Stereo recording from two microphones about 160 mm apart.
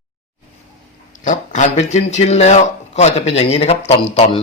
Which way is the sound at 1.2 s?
50° left (ahead or behind).